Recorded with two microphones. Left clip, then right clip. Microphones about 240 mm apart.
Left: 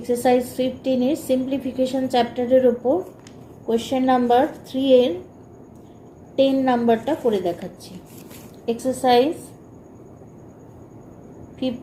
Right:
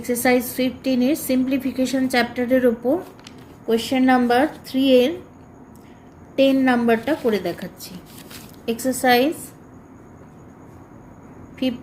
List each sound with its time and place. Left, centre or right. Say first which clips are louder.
0.0 s a woman's voice: left 1 dB; right
6.3 s a woman's voice: right 1 dB; right
8.6 s a woman's voice: even; right